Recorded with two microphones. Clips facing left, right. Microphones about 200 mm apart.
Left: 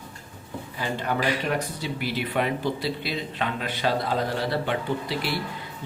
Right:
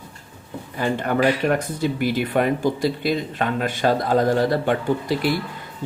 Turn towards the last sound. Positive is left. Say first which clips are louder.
# right 7 dB
turn(degrees=-45)  # may be behind; listen again after turning